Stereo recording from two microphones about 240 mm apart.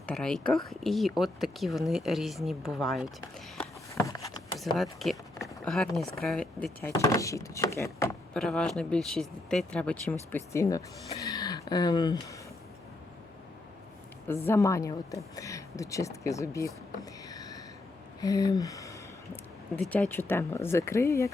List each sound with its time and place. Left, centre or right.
0.0 s speech: centre
3.6 s a sound: centre
4.6 s a woman's voice: centre
14.3 s a woman's voice: centre
17.2 s a sound: centre
18.2 s a woman's voice: centre